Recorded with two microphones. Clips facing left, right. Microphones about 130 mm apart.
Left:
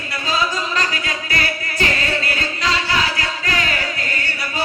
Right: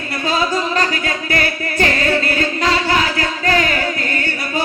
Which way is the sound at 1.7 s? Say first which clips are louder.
Right 6 dB; 45° right (ahead or behind).